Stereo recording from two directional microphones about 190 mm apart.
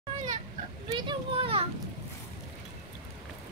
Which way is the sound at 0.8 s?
25° right (ahead or behind).